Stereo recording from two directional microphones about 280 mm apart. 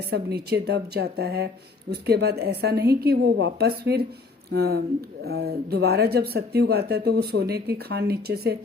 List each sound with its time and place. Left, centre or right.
0.1 s speech: right